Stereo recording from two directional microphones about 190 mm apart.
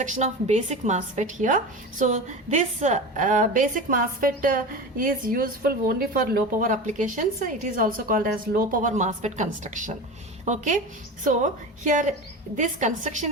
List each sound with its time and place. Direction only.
0.0 s a woman's voice: 35° right (ahead or behind)